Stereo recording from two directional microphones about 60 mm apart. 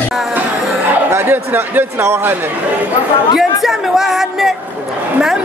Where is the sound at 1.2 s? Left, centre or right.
Right.